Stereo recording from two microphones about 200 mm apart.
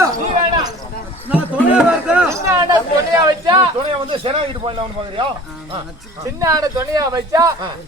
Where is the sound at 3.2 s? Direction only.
20° right (ahead or behind).